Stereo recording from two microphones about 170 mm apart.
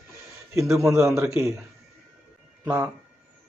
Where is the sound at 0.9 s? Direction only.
15° right (ahead or behind).